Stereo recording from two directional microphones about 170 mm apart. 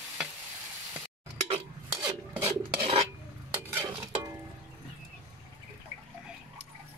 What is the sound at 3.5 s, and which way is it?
Stir, 15° right (ahead or behind).